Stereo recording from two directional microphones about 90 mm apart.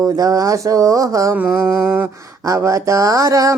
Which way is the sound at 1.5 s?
20° right (ahead or behind).